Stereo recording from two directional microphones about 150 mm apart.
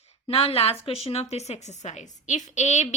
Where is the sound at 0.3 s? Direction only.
40° left (ahead or behind).